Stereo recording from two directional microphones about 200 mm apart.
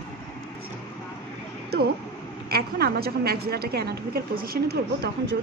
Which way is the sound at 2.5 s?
50° right (ahead or behind).